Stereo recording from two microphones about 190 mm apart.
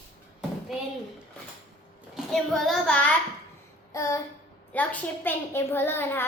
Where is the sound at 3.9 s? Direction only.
15° left (ahead or behind).